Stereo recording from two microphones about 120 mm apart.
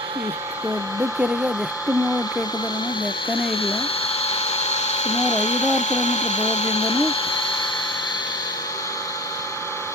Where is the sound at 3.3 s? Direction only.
50° left (ahead or behind).